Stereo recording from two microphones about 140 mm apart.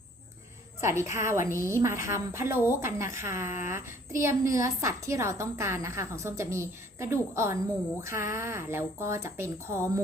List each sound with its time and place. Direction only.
0.8 s a woman's voice: 20° right (ahead or behind)